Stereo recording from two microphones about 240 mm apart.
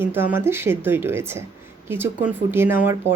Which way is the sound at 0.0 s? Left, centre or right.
Centre.